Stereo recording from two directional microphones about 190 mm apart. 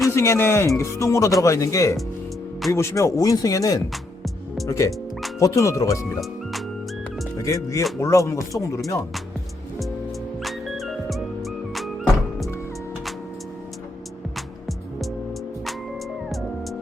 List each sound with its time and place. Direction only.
0.1 s speech: 15° left (ahead or behind)
6.1 s music: centre (ahead or behind)
7.3 s speech: 15° left (ahead or behind)
10.4 s music: centre (ahead or behind)
14.3 s music: centre (ahead or behind)